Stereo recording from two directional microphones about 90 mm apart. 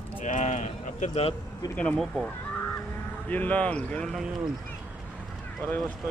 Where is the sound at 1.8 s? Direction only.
10° left (ahead or behind).